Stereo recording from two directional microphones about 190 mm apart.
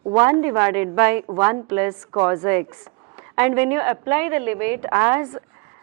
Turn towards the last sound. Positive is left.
turn(degrees=-10)  # may be behind; listen again after turning